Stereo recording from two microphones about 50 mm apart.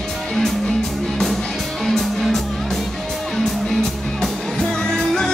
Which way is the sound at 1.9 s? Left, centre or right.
Centre.